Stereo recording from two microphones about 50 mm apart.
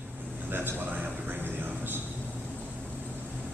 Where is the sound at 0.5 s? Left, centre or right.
Right.